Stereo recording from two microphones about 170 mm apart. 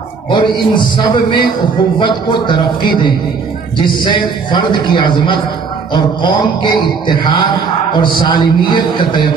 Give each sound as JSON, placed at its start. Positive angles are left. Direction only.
{"t": 0.3, "sound": "a man's voice", "side_deg": 30}